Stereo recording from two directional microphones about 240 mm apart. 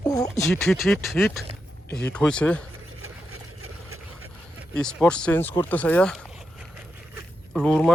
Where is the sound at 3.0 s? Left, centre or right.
Right.